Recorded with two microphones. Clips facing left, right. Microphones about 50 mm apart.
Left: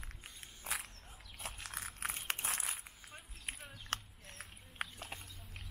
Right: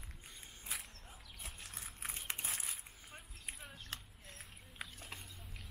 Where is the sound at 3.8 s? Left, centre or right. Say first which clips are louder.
Left 7 dB; left.